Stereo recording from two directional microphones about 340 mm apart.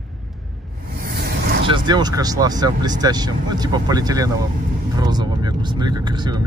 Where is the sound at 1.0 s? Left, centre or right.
Right.